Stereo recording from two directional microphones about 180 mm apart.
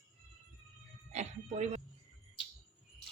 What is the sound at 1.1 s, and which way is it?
Speech, 40° right (ahead or behind).